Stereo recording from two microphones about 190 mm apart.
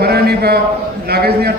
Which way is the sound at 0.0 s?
55° right (ahead or behind).